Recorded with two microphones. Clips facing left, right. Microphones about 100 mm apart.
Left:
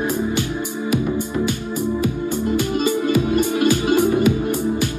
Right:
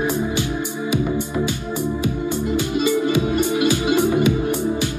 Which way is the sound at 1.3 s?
15° right (ahead or behind).